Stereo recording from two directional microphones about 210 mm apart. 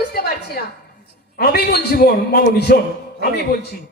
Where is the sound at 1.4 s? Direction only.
50° left (ahead or behind).